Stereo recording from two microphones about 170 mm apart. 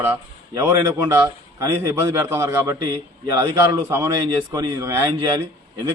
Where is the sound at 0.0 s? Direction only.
10° right (ahead or behind).